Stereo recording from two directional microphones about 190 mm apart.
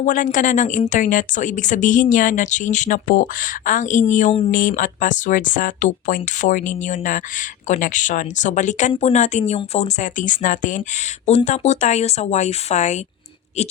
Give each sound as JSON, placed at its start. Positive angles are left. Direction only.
{"t": 0.0, "sound": "speech", "side_deg": 45}